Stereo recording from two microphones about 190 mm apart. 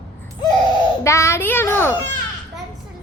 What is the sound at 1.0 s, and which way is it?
Speech, 15° left (ahead or behind).